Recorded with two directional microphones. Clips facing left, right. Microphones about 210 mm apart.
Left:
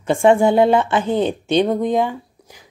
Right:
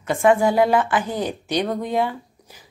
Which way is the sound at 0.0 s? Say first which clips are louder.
Left 3 dB; 30° left (ahead or behind).